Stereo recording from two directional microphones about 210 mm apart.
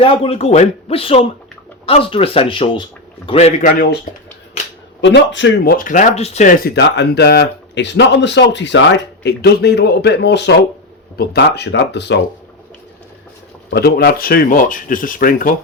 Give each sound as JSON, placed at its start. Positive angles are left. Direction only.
{"t": 0.0, "sound": "speech", "side_deg": 25}
{"t": 4.9, "sound": "speech", "side_deg": 60}
{"t": 5.7, "sound": "speech", "side_deg": 40}
{"t": 13.7, "sound": "speech", "side_deg": 50}